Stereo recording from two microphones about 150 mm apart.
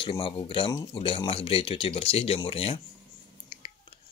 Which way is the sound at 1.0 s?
40° left (ahead or behind).